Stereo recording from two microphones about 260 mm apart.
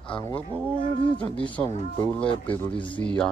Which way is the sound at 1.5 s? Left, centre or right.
Centre.